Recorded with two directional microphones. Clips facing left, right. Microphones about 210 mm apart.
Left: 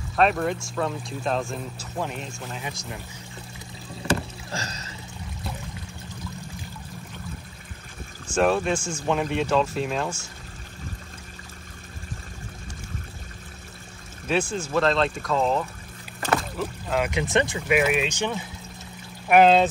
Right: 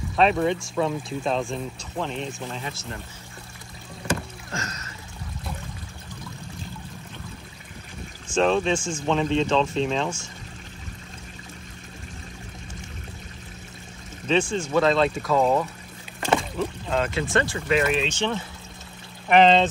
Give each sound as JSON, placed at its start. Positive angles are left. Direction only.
{"t": 0.1, "sound": "speech", "side_deg": 0}
{"t": 4.5, "sound": "music", "side_deg": 35}
{"t": 8.4, "sound": "speech", "side_deg": 5}
{"t": 14.2, "sound": "speech", "side_deg": 5}
{"t": 16.3, "sound": "rowboat", "side_deg": 5}
{"t": 17.1, "sound": "speech", "side_deg": 20}